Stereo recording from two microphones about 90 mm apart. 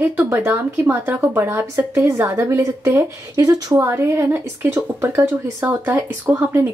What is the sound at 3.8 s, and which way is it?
Speech, 30° right (ahead or behind).